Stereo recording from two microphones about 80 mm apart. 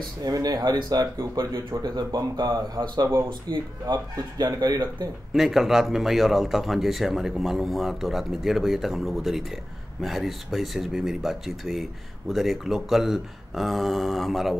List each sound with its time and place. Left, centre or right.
0.2 s speech: right
3.3 s speech: right
3.8 s speech: right
5.3 s speech: centre